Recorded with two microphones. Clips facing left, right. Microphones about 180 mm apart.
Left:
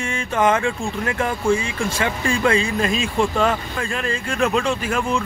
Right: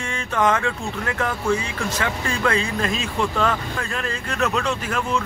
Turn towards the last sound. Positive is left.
turn(degrees=10)  # may be behind; listen again after turning